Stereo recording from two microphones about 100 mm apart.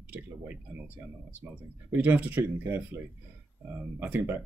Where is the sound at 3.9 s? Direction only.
20° right (ahead or behind).